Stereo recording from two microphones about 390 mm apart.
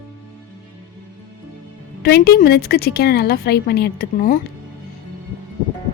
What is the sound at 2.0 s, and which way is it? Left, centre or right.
A woman's voice, left.